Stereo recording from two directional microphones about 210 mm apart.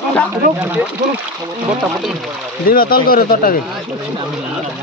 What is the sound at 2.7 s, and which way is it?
Speech, 45° left (ahead or behind).